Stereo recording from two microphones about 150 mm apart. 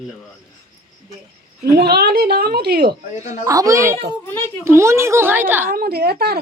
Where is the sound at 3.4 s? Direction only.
20° right (ahead or behind).